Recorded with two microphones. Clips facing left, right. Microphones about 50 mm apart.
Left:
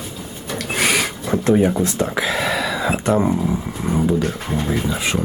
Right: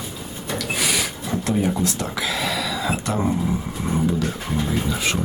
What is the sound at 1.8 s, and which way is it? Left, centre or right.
Speech, left.